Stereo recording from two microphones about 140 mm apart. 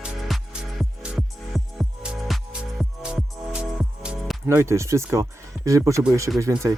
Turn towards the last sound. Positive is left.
turn(degrees=-20)  # may be behind; listen again after turning